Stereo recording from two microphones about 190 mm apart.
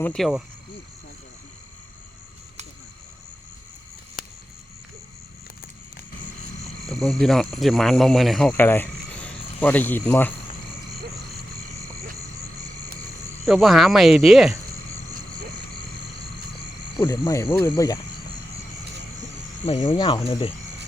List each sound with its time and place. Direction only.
0.0 s speech: centre (ahead or behind)
6.8 s speech: centre (ahead or behind)
13.5 s speech: centre (ahead or behind)
17.0 s speech: 20° left (ahead or behind)
19.6 s speech: 30° left (ahead or behind)